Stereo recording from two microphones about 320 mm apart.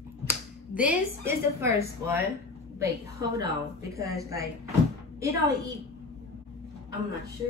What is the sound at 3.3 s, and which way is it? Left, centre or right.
Speech, centre.